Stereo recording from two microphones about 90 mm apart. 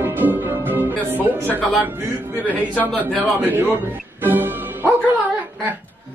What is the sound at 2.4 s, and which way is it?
Speech, 20° left (ahead or behind).